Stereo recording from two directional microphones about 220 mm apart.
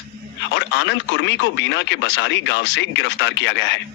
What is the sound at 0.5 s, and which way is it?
Speech, 55° left (ahead or behind).